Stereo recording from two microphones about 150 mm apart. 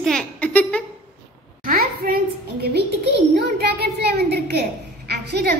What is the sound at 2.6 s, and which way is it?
A child's voice, 90° right.